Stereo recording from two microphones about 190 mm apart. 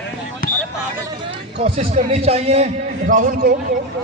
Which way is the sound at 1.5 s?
30° right (ahead or behind).